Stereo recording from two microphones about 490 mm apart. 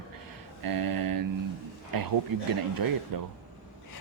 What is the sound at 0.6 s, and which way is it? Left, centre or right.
Speech, right.